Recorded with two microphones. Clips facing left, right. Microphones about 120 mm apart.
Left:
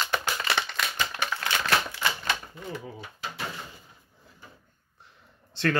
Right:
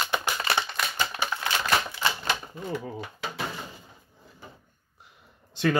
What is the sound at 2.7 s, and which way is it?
Speech, 35° right (ahead or behind).